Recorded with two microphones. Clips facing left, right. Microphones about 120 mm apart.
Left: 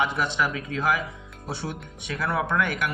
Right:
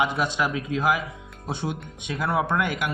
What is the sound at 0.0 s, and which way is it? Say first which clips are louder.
Speech: right 1 dB; 15° right (ahead or behind).